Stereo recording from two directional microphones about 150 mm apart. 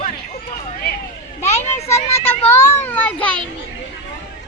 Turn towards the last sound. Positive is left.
turn(degrees=10)  # may be behind; listen again after turning